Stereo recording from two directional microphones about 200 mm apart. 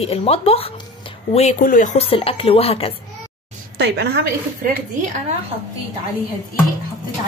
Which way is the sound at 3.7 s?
60° right (ahead or behind).